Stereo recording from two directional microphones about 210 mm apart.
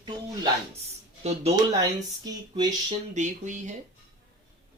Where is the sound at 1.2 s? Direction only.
30° right (ahead or behind).